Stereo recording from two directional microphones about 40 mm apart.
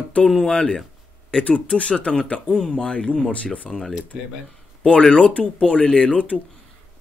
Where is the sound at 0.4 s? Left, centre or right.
Centre.